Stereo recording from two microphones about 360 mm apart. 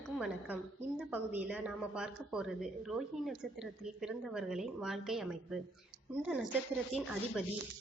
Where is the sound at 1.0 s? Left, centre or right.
Centre.